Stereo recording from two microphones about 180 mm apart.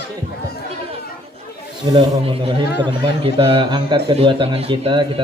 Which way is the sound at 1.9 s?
25° right (ahead or behind).